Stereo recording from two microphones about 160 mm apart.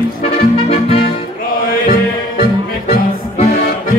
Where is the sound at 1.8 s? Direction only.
65° left (ahead or behind).